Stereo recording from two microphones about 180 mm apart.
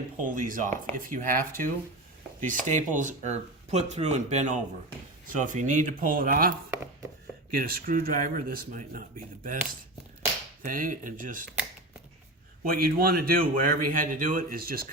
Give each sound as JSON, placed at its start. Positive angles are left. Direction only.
{"t": 0.3, "sound": "a man's voice", "side_deg": -45}
{"t": 7.5, "sound": "a man's voice", "side_deg": -55}
{"t": 10.6, "sound": "a man's voice", "side_deg": -50}
{"t": 12.6, "sound": "a man's voice", "side_deg": -55}